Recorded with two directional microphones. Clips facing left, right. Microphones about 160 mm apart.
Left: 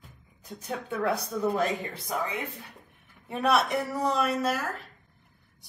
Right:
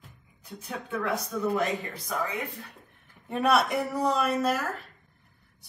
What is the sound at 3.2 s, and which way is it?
A woman's voice, centre (ahead or behind).